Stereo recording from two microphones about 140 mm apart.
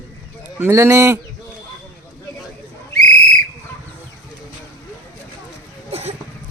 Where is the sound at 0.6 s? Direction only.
20° right (ahead or behind).